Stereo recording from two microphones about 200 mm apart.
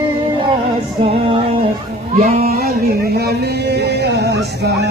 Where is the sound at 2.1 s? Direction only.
45° right (ahead or behind).